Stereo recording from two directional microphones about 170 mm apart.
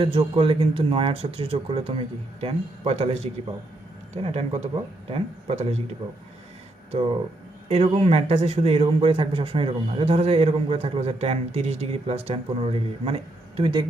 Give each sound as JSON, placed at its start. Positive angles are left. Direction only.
{"t": 0.0, "sound": "a man's voice", "side_deg": -30}
{"t": 6.9, "sound": "a man's voice", "side_deg": -30}